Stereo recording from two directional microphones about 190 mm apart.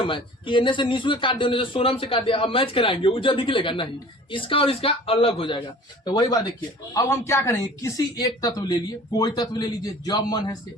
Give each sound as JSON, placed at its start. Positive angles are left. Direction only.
{"t": 0.1, "sound": "speech", "side_deg": 25}